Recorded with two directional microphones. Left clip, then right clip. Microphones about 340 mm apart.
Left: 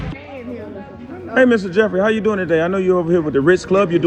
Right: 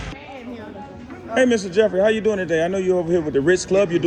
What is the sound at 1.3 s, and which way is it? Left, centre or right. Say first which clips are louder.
Speech: left 4 dB; centre.